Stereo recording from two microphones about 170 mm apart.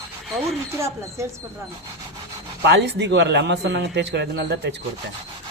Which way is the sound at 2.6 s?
90° right.